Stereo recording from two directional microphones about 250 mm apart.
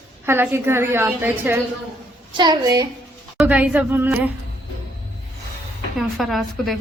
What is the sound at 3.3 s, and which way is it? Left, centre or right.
Speech, centre.